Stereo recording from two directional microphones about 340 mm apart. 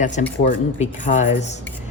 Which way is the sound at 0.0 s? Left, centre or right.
Left.